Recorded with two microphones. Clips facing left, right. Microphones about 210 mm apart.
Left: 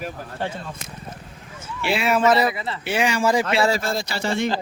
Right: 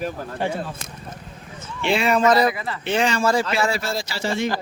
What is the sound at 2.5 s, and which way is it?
Speech, 25° left (ahead or behind).